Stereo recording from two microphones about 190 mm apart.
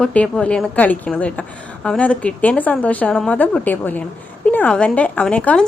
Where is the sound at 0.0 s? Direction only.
5° left (ahead or behind).